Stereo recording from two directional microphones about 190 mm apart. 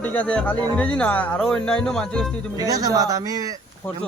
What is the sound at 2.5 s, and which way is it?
Speech, 20° right (ahead or behind).